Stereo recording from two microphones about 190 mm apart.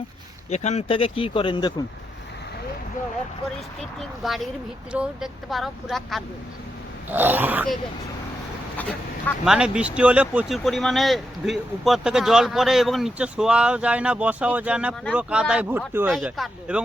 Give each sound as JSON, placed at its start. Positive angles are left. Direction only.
{"t": 0.5, "sound": "speech", "side_deg": 35}
{"t": 3.8, "sound": "speech", "side_deg": 0}
{"t": 7.1, "sound": "speech", "side_deg": -10}
{"t": 9.4, "sound": "speech", "side_deg": -5}
{"t": 16.0, "sound": "speech", "side_deg": 0}